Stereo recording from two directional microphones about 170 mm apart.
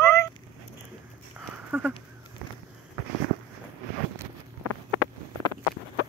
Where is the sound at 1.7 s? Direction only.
10° right (ahead or behind).